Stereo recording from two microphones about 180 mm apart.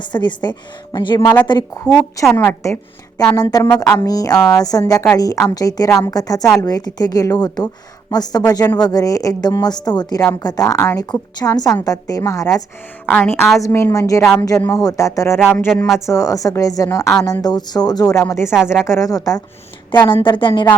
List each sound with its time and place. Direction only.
0.0 s a woman's voice: 25° left (ahead or behind)
4.4 s speech: 5° left (ahead or behind)
4.6 s a woman's voice: 20° left (ahead or behind)